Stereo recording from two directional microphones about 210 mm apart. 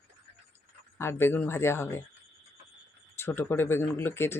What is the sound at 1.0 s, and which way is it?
Speech, 10° left (ahead or behind).